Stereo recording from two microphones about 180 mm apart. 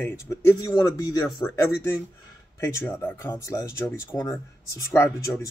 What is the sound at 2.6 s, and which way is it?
Speech, 15° left (ahead or behind).